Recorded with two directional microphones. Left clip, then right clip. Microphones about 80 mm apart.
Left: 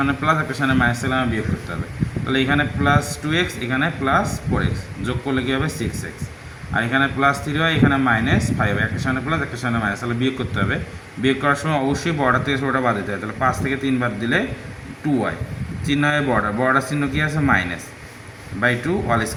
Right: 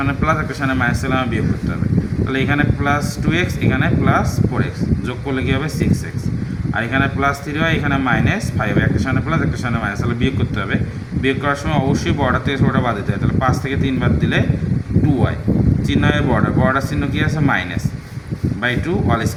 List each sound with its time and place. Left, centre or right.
0.0 s a man's voice: centre
2.3 s a man's voice: centre
6.7 s a man's voice: centre
15.9 s speech: centre